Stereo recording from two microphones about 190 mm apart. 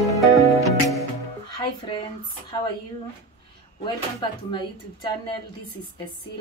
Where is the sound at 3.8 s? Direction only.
25° left (ahead or behind).